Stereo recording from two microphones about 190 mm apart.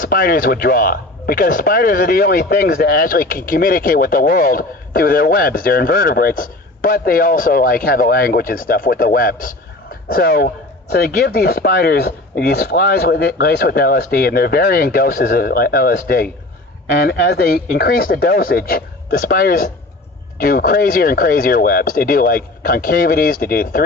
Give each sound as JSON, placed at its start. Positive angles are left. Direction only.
{"t": 0.0, "sound": "speech", "side_deg": 50}